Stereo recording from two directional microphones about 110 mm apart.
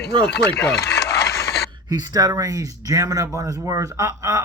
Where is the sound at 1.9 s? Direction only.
35° right (ahead or behind).